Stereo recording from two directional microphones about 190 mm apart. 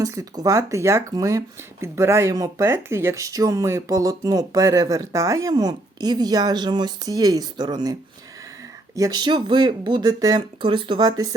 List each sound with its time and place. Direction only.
0.0 s speech: 15° right (ahead or behind)
9.0 s speech: 20° right (ahead or behind)